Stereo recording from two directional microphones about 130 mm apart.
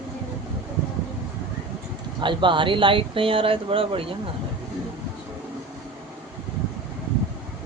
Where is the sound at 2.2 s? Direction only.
40° right (ahead or behind).